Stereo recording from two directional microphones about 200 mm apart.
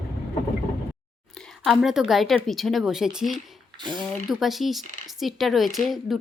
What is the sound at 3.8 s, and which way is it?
Speech, 20° right (ahead or behind).